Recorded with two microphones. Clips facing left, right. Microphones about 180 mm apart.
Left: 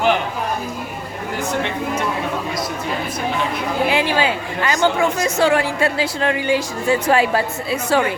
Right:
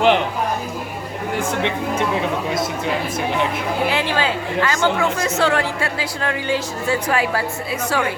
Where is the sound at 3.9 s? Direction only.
15° left (ahead or behind).